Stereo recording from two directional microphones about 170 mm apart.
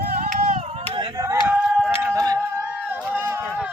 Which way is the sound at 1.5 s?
5° right (ahead or behind).